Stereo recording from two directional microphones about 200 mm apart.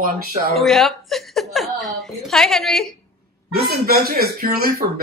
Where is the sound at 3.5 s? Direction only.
50° right (ahead or behind).